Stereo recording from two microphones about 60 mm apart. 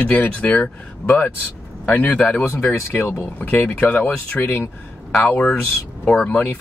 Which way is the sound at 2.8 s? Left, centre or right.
Left.